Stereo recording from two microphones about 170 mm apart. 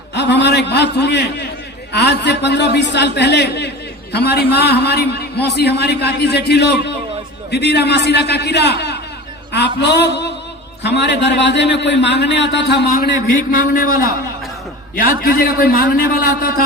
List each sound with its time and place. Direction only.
0.1 s a man's voice: 90° left
4.1 s a man's voice: 70° left (ahead or behind); by 12.8 s 90° left
13.5 s a man's voice: 55° left (ahead or behind)